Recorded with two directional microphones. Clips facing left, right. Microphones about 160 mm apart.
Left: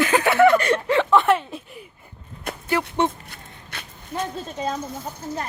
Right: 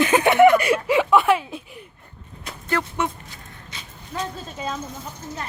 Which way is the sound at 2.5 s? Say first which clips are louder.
Left 2 dB; 55° left (ahead or behind).